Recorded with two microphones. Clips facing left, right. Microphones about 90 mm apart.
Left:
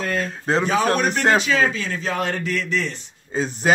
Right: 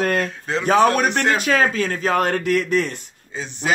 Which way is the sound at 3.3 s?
40° left (ahead or behind).